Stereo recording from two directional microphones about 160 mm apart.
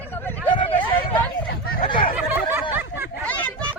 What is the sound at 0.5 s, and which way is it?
Vehicle, 30° left (ahead or behind).